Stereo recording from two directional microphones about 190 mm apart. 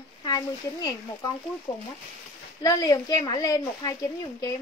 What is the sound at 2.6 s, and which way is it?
Speech, 20° left (ahead or behind).